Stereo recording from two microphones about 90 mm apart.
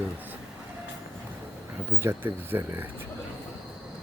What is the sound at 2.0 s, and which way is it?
Speech, 25° right (ahead or behind).